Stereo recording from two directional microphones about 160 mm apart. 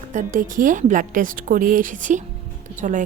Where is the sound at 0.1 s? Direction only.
50° right (ahead or behind).